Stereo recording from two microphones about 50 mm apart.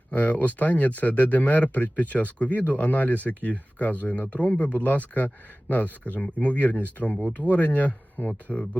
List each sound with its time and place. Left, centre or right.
0.1 s speech: left